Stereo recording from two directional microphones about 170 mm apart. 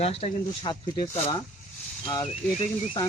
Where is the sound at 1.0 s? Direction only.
25° left (ahead or behind).